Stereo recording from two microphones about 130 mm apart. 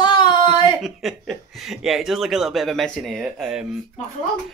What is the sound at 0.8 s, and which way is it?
Speech, centre (ahead or behind).